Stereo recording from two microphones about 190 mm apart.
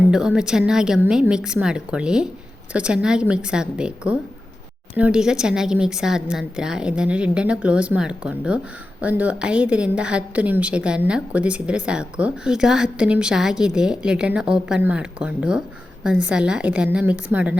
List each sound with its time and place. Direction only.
0.0 s a woman's voice: 5° right (ahead or behind)